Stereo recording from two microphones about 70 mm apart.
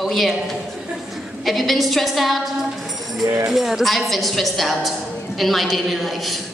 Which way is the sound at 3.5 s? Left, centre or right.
Centre.